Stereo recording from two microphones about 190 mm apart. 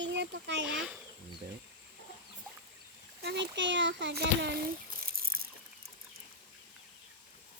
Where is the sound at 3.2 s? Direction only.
65° right (ahead or behind).